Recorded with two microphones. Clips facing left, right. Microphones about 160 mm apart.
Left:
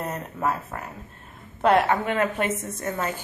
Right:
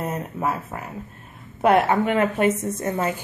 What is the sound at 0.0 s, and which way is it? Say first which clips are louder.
Speech: right 2 dB; 10° right (ahead or behind).